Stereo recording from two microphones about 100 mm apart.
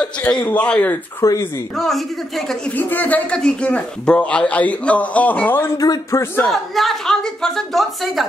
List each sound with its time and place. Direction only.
0.5 s a man's voice: 15° left (ahead or behind)
1.2 s speech: 30° left (ahead or behind)
1.8 s a woman's voice: centre (ahead or behind)
2.8 s a man's voice: 15° left (ahead or behind)
5.6 s speech: 35° left (ahead or behind)
6.4 s a woman's voice: centre (ahead or behind)